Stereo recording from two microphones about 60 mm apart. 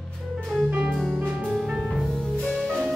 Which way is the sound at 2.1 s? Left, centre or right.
Centre.